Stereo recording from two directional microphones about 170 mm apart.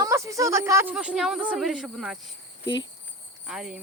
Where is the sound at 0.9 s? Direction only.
5° right (ahead or behind).